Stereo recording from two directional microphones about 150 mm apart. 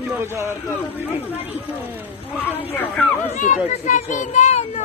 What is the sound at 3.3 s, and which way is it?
A child's voice, 55° left (ahead or behind).